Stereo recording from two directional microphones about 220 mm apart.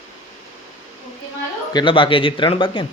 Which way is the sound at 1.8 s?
25° left (ahead or behind).